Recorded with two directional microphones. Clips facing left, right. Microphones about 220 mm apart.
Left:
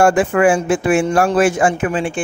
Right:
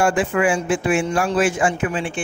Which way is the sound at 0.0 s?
45° left (ahead or behind).